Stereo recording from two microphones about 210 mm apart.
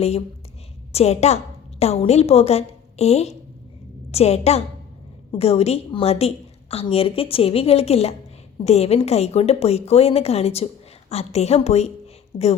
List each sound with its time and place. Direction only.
0.9 s a woman's voice: 30° left (ahead or behind)